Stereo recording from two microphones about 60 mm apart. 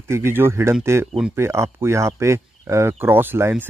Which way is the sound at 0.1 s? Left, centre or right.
Right.